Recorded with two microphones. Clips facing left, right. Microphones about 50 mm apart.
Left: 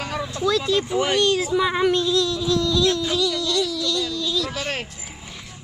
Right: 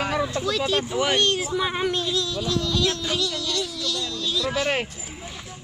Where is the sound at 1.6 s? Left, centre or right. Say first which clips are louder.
Left 5 dB; left.